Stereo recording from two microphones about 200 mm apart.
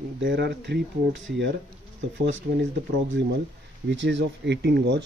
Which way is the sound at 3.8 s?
65° right (ahead or behind).